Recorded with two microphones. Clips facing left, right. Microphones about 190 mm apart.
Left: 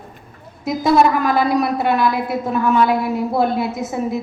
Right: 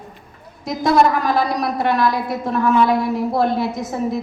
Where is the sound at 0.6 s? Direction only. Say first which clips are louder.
Left 1 dB; centre (ahead or behind).